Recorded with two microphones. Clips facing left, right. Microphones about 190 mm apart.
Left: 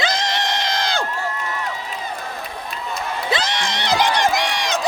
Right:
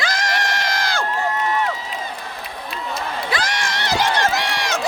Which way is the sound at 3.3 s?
20° left (ahead or behind).